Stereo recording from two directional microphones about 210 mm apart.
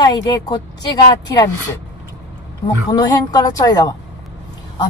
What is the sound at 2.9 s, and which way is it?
Speech, 20° left (ahead or behind).